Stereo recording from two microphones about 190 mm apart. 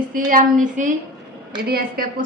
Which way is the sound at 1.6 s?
55° right (ahead or behind).